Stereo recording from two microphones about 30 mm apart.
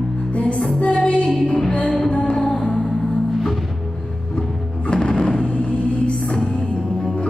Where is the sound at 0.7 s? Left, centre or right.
Left.